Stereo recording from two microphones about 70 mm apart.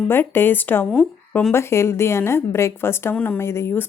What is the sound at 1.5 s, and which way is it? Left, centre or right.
A woman's voice, left.